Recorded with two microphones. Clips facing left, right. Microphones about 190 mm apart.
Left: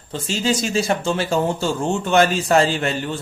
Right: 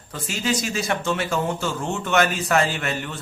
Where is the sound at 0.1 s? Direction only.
30° left (ahead or behind).